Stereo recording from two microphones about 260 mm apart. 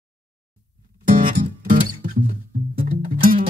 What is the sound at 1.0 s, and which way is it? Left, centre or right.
Music, right.